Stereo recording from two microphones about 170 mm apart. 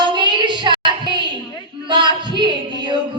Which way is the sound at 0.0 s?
25° right (ahead or behind).